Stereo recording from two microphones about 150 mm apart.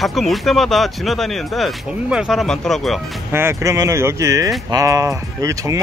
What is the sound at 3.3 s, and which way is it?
Speech, 20° right (ahead or behind).